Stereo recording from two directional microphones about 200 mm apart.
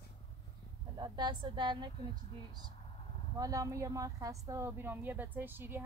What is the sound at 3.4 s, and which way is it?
Speech, 15° right (ahead or behind).